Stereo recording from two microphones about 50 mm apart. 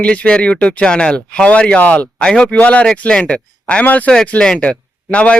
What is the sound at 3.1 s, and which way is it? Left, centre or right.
Speech, centre.